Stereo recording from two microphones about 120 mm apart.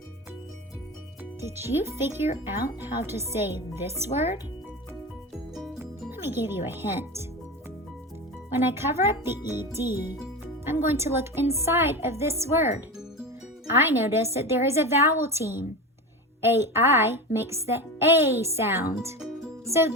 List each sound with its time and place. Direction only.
1.4 s speech: 20° right (ahead or behind)
5.8 s speech: 20° right (ahead or behind)
8.5 s speech: 20° right (ahead or behind)
13.8 s speech: 20° right (ahead or behind)
19.6 s music: 25° right (ahead or behind)